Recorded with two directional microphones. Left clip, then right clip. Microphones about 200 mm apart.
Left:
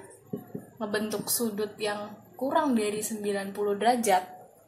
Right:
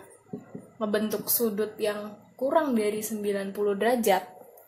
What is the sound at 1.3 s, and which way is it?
Speech, 15° right (ahead or behind).